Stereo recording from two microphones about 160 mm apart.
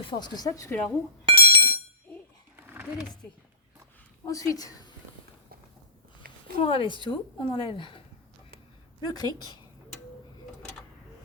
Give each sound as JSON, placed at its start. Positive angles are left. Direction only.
{"t": 0.0, "sound": "speech", "side_deg": 30}
{"t": 1.2, "sound": "a sound", "side_deg": -35}
{"t": 2.6, "sound": "a sound", "side_deg": -10}
{"t": 4.3, "sound": "speech", "side_deg": 20}
{"t": 6.6, "sound": "a woman's voice", "side_deg": 35}
{"t": 9.0, "sound": "speech", "side_deg": 25}